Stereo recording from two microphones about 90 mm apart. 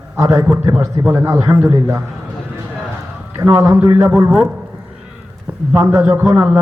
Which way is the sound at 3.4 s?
35° right (ahead or behind).